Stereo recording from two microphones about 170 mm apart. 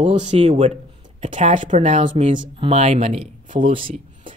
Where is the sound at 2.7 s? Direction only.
40° right (ahead or behind).